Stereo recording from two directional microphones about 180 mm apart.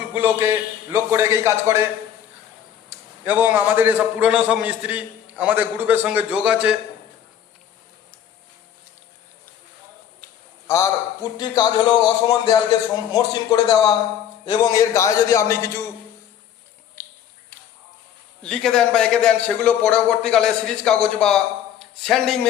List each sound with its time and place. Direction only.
0.1 s a man's voice: 10° right (ahead or behind)
2.9 s a man's voice: 10° right (ahead or behind)
10.7 s a man's voice: 20° left (ahead or behind)
17.0 s finger snapping: 10° left (ahead or behind)
18.4 s a man's voice: 5° left (ahead or behind)